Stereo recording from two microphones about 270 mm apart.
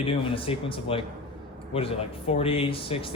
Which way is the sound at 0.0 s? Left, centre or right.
Centre.